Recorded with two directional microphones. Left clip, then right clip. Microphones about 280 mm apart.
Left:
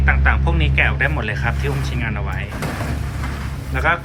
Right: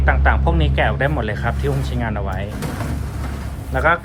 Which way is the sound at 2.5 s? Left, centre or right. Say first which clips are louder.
Left 2 dB; centre.